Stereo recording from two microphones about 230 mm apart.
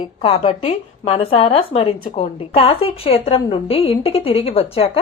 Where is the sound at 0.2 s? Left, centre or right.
Left.